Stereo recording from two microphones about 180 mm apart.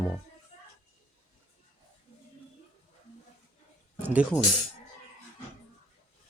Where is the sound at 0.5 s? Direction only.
35° left (ahead or behind).